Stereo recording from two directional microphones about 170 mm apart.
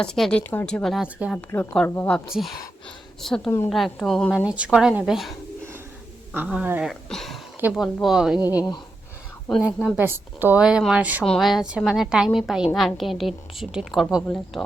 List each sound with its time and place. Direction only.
0.0 s a woman's voice: 5° left (ahead or behind)
1.4 s a woman's voice: 10° left (ahead or behind)
6.3 s a woman's voice: 10° right (ahead or behind)
8.4 s speech: 25° left (ahead or behind)
9.6 s a woman's voice: centre (ahead or behind)